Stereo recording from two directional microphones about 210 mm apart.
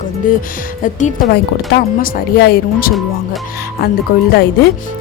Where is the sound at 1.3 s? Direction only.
45° left (ahead or behind).